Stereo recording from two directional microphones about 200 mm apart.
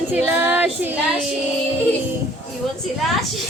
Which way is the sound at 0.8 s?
10° right (ahead or behind).